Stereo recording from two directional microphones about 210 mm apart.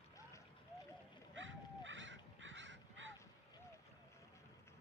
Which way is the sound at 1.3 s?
65° right (ahead or behind).